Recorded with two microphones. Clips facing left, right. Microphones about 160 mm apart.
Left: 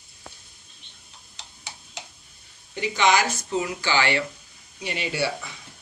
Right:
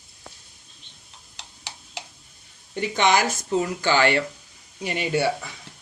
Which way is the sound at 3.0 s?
50° right (ahead or behind).